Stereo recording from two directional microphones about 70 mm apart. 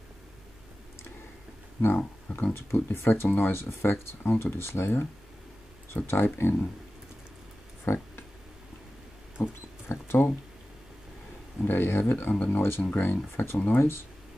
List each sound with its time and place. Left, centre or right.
1.8 s speech: left
7.8 s a sound: left
9.4 s rodents: left
9.8 s speech: left
11.6 s speech: left